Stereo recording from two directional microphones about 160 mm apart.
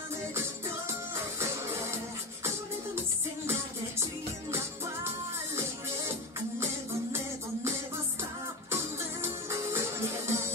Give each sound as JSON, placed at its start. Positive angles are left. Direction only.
{"t": 1.4, "sound": "music", "side_deg": -15}
{"t": 8.7, "sound": "music", "side_deg": -15}